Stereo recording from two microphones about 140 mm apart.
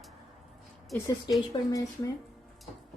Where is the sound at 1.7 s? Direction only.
25° left (ahead or behind).